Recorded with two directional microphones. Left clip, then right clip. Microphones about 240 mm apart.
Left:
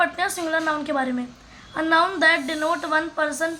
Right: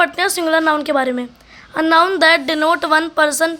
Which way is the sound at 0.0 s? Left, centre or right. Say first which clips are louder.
Right 7 dB; right.